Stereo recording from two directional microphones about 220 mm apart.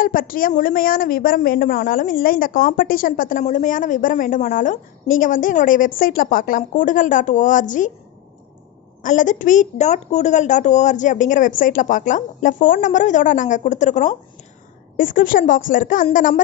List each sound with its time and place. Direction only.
0.0 s a woman's voice: 40° left (ahead or behind)
9.0 s a woman's voice: 35° left (ahead or behind)